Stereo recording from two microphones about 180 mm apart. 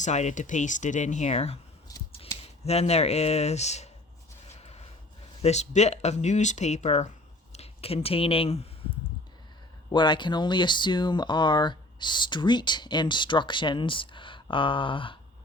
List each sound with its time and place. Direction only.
0.0 s speech: 40° left (ahead or behind)
4.4 s a sound: 35° left (ahead or behind)
5.4 s speech: 40° left (ahead or behind)
9.9 s speech: 25° left (ahead or behind)